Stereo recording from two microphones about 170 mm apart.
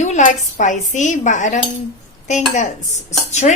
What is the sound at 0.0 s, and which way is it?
Speech, 45° left (ahead or behind).